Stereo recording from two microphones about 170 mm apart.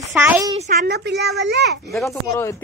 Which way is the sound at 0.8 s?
75° right (ahead or behind).